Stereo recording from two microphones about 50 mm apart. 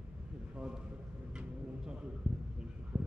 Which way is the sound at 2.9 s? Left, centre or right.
Centre.